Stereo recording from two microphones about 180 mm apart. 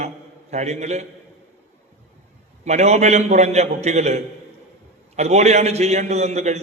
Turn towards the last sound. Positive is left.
turn(degrees=-35)  # may be behind; listen again after turning